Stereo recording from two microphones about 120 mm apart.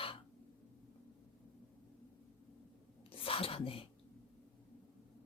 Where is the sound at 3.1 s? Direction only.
50° left (ahead or behind).